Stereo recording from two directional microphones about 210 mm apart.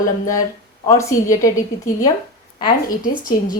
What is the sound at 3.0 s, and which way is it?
Speech, 45° left (ahead or behind).